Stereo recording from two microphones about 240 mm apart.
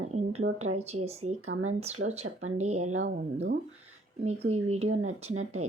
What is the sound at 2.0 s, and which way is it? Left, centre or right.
Speech, right.